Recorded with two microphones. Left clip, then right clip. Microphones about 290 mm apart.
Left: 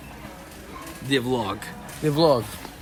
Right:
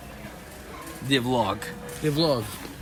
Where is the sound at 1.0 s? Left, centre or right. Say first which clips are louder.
Right 1 dB; centre.